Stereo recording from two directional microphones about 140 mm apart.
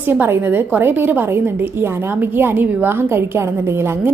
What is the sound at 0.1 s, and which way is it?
A woman's voice, 15° right (ahead or behind).